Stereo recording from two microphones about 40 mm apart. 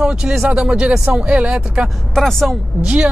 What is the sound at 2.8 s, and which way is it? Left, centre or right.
Speech, right.